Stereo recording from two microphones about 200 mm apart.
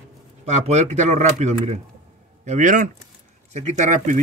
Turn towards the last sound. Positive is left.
turn(degrees=-40)  # may be behind; listen again after turning